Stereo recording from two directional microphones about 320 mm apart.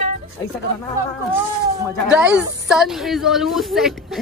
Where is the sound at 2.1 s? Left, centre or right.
Centre.